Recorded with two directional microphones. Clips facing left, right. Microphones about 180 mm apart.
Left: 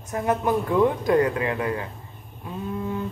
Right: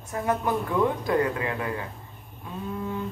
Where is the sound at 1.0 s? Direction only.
20° left (ahead or behind).